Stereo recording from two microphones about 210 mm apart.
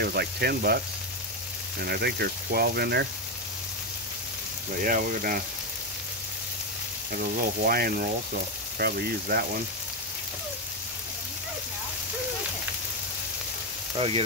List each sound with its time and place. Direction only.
0.0 s speech: 50° right (ahead or behind)
1.8 s speech: 50° right (ahead or behind)
4.8 s speech: 40° right (ahead or behind)
7.1 s speech: 45° right (ahead or behind)
13.9 s speech: 25° right (ahead or behind)